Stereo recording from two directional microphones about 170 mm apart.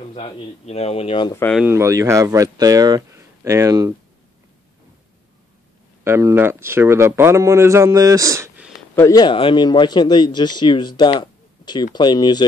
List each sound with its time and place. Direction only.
0.1 s speech: 40° left (ahead or behind)
1.3 s speech: 10° left (ahead or behind)
1.6 s speech: 15° right (ahead or behind)
6.0 s speech: 15° right (ahead or behind)
8.9 s speech: 20° left (ahead or behind)